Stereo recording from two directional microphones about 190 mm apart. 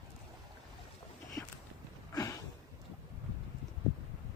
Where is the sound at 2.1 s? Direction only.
15° left (ahead or behind).